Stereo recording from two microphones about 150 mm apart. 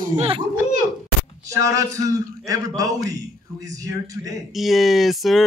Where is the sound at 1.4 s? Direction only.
20° right (ahead or behind).